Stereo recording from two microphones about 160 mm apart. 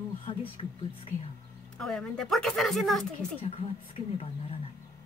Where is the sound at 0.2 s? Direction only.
35° left (ahead or behind).